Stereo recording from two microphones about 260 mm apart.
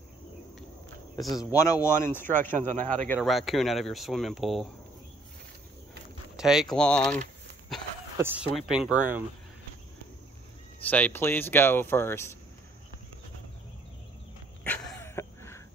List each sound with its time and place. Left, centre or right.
1.2 s speech: centre
1.5 s speech: centre
2.7 s speech: right
3.1 s speech: centre
6.3 s speech: centre
8.2 s speech: centre
10.9 s speech: centre
14.6 s a sound: centre